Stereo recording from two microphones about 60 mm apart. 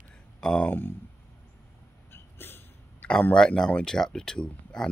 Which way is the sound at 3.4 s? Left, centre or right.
Centre.